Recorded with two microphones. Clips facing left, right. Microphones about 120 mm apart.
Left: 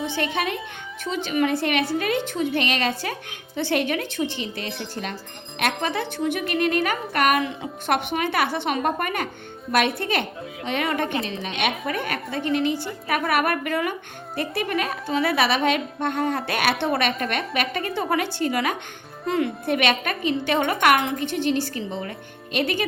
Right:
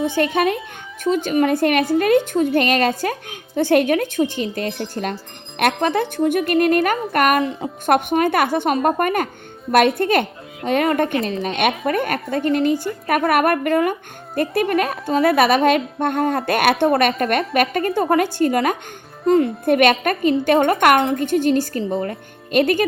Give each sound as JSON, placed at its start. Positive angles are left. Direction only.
{"t": 0.2, "sound": "a woman's voice", "side_deg": -45}
{"t": 19.2, "sound": "speech", "side_deg": -35}
{"t": 19.6, "sound": "a woman's voice", "side_deg": -50}